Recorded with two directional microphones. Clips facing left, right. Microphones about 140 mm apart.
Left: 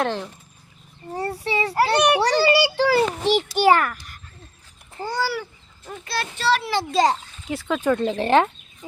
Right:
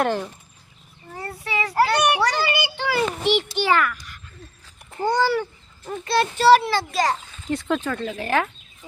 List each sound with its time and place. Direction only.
0.0 s speech: 5° right (ahead or behind)
1.1 s a child's voice: 35° left (ahead or behind)
5.1 s a child's voice: 5° left (ahead or behind)
6.7 s a child's voice: 20° left (ahead or behind)
7.4 s speech: centre (ahead or behind)
8.0 s a child's voice: 30° left (ahead or behind)